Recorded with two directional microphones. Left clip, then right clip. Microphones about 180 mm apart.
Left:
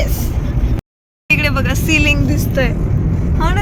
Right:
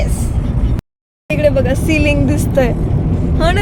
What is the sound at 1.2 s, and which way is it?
Speech, 10° right (ahead or behind).